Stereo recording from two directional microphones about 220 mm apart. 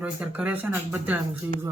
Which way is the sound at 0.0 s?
5° right (ahead or behind).